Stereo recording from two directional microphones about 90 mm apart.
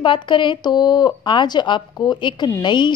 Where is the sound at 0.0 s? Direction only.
65° left (ahead or behind).